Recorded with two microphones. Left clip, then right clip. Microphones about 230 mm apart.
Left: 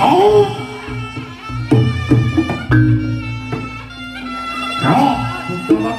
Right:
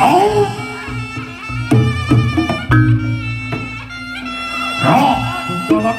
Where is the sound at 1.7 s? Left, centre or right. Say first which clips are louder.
Left 1 dB; right.